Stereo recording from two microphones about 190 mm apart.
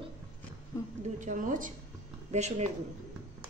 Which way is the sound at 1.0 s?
40° right (ahead or behind).